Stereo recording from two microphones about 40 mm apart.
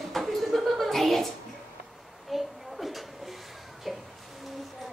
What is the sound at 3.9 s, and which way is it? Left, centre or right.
Music, centre.